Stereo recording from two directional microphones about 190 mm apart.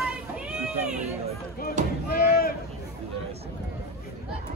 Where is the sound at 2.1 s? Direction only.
50° left (ahead or behind).